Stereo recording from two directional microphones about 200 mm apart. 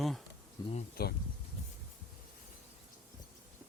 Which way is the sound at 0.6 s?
20° left (ahead or behind).